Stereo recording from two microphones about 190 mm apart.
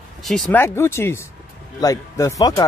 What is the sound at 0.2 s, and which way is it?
Speech, centre (ahead or behind).